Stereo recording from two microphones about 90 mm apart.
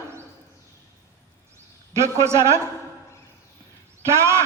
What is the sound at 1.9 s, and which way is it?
Speech, 30° right (ahead or behind).